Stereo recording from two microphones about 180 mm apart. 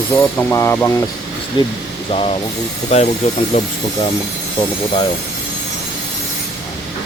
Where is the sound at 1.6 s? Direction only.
25° left (ahead or behind).